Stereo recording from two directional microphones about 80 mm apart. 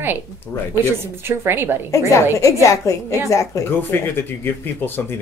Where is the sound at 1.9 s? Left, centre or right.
Left.